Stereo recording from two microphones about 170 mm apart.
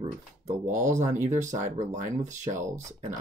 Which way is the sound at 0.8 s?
45° right (ahead or behind).